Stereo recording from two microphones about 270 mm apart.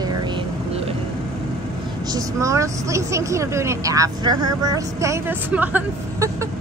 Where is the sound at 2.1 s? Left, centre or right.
Centre.